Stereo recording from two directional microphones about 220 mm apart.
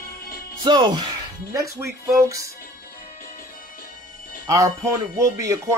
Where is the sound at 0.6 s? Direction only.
20° right (ahead or behind).